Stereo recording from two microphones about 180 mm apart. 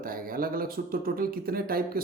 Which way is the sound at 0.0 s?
55° right (ahead or behind).